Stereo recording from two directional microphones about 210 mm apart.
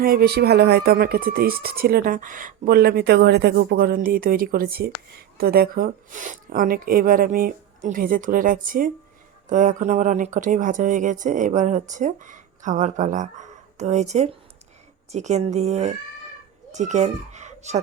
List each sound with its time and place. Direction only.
0.0 s a child's voice: 45° right (ahead or behind)